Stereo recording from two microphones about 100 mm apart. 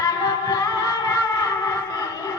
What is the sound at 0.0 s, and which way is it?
Music, 40° left (ahead or behind).